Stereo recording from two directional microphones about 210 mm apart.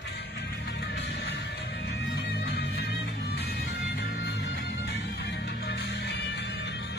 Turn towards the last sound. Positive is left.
turn(degrees=55)  # may be behind; listen again after turning